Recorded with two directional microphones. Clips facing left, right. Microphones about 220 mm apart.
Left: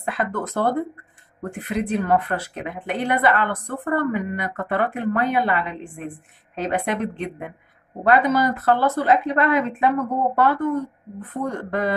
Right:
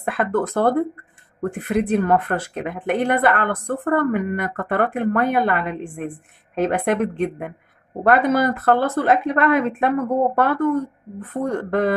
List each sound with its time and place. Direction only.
0.0 s speech: 50° right (ahead or behind)